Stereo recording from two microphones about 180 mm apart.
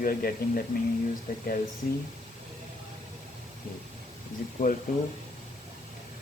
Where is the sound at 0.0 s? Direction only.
55° left (ahead or behind).